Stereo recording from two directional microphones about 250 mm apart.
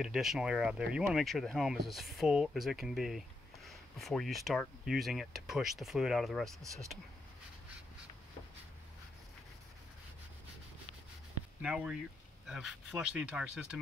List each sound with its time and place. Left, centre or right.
0.0 s speech: centre
6.6 s speech: centre
11.6 s speech: centre